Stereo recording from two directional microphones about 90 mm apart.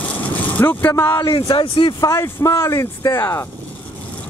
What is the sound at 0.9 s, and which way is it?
Speech, 30° left (ahead or behind).